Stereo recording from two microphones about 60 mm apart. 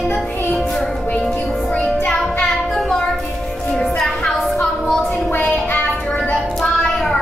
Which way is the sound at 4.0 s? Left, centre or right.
Centre.